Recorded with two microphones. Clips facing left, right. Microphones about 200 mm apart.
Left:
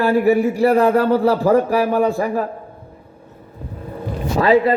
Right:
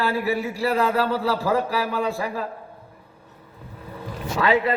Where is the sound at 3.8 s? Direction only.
45° left (ahead or behind).